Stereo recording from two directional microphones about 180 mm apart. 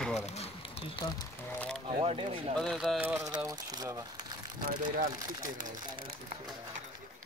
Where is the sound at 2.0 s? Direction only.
30° right (ahead or behind).